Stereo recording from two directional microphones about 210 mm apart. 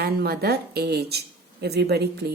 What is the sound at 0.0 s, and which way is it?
A woman's voice, 50° right (ahead or behind).